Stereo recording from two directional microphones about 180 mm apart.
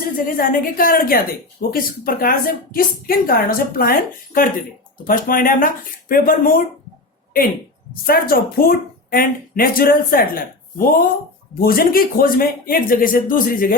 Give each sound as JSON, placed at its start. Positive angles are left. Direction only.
{"t": 0.2, "sound": "speech", "side_deg": 50}
{"t": 8.0, "sound": "speech", "side_deg": 55}